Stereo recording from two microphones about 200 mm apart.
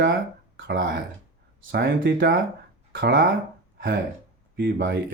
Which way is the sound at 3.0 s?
50° right (ahead or behind).